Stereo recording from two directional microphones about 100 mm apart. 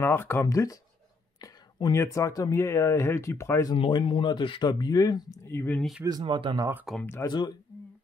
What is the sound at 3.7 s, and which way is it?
Speech, 65° left (ahead or behind).